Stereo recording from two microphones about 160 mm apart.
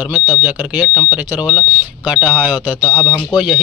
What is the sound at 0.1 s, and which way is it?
Speech, 10° right (ahead or behind).